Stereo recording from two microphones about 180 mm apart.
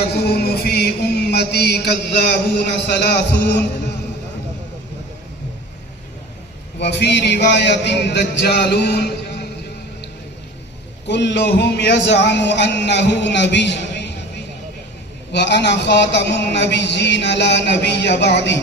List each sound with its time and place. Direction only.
0.1 s chant: 65° left (ahead or behind)
2.8 s a man's voice: 70° left (ahead or behind)
6.7 s a man's voice: 70° left (ahead or behind)
11.0 s a man's voice: 75° left (ahead or behind)